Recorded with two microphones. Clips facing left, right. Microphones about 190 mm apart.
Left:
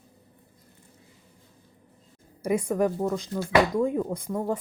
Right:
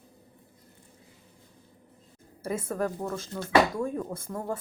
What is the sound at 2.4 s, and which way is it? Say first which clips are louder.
Speech: left 6 dB; 15° left (ahead or behind).